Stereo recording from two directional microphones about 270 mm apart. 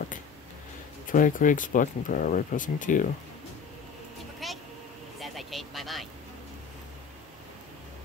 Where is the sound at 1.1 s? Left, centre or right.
Left.